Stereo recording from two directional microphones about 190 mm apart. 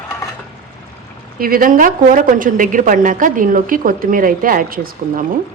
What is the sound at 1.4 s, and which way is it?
Speech, 50° right (ahead or behind).